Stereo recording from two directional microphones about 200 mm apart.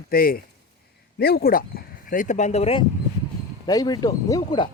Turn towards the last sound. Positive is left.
turn(degrees=20)  # may be behind; listen again after turning